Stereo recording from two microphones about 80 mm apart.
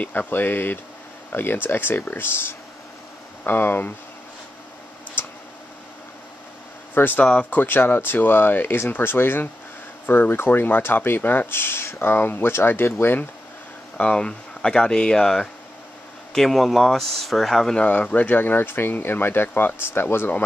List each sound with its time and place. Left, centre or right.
0.0 s speech: centre
5.2 s tick: left
6.9 s speech: left
13.9 s speech: centre
17.7 s speech: centre